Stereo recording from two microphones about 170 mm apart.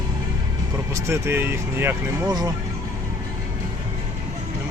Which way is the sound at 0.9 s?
15° right (ahead or behind).